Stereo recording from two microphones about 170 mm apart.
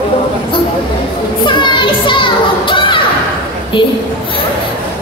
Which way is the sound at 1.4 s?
30° left (ahead or behind).